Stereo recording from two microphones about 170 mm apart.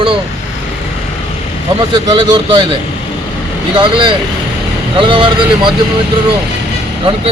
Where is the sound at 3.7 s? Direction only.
30° right (ahead or behind).